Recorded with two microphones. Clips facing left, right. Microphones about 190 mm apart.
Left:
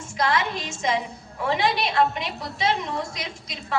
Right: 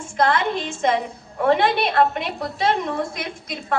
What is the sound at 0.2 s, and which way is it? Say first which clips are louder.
A woman's voice: right 4 dB; 55° right (ahead or behind).